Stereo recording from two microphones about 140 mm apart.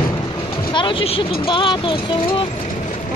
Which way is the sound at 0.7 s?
35° left (ahead or behind).